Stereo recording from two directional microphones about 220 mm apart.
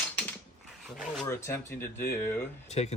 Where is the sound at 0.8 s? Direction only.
Centre (ahead or behind).